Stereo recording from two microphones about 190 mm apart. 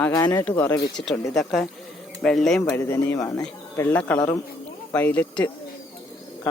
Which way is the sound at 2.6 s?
15° left (ahead or behind).